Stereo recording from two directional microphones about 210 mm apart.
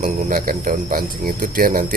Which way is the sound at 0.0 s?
40° right (ahead or behind).